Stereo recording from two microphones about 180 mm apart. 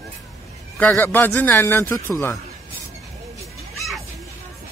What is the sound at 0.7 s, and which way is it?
Speech, 10° left (ahead or behind).